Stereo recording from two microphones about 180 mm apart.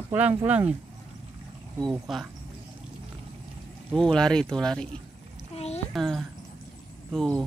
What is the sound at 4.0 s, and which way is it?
Speech, 5° left (ahead or behind).